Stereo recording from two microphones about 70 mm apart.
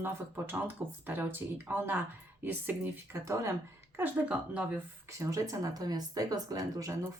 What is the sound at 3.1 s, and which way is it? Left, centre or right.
Speech, right.